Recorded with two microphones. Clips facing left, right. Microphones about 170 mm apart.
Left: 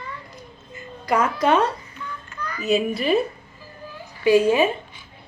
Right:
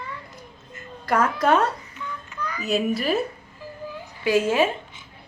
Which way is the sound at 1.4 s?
Centre (ahead or behind).